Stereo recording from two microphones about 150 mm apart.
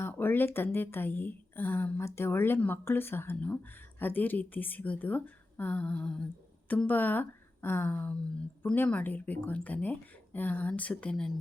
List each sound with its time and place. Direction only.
0.0 s speech: 15° left (ahead or behind)